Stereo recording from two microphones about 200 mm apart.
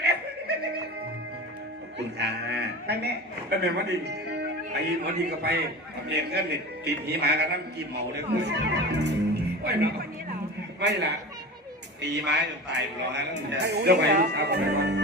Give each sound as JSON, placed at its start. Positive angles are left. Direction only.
{"t": 0.0, "sound": "music", "side_deg": -55}
{"t": 2.0, "sound": "a man's voice", "side_deg": -60}